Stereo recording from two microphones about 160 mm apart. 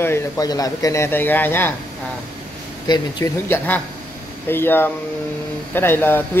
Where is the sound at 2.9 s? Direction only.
25° left (ahead or behind).